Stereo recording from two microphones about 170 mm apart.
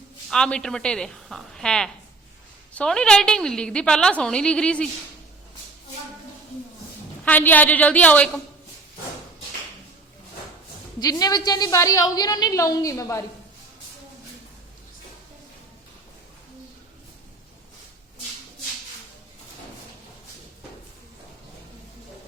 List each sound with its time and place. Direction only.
0.3 s a woman's voice: 5° left (ahead or behind)
7.3 s a woman's voice: 10° left (ahead or behind)
11.0 s a woman's voice: 25° left (ahead or behind)